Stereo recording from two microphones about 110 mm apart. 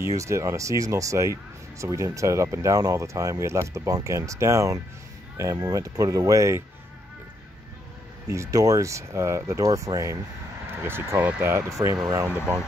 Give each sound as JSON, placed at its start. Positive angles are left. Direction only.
{"t": 0.0, "sound": "speech", "side_deg": -25}
{"t": 8.3, "sound": "speech", "side_deg": -30}
{"t": 10.7, "sound": "speech", "side_deg": -20}